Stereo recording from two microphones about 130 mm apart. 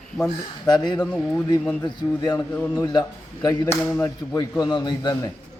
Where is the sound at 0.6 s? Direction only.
35° left (ahead or behind).